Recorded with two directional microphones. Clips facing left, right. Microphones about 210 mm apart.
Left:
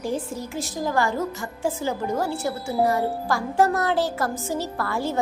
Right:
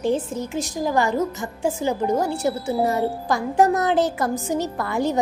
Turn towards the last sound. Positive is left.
turn(degrees=-15)  # may be behind; listen again after turning